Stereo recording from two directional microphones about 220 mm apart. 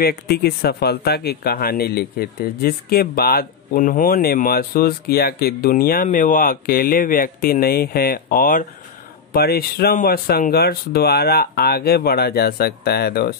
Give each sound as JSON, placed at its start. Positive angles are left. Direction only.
{"t": 0.0, "sound": "speech", "side_deg": 45}